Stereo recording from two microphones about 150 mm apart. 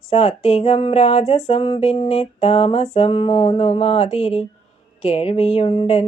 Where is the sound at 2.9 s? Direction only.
40° left (ahead or behind).